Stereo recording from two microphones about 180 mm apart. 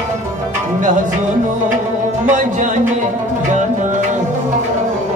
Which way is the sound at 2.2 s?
45° right (ahead or behind).